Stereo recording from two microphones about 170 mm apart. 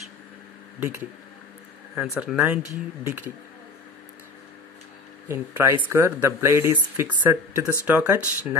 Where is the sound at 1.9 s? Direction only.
5° right (ahead or behind).